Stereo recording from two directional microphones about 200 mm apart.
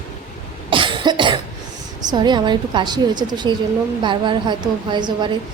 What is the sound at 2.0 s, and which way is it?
A woman's voice, 20° right (ahead or behind).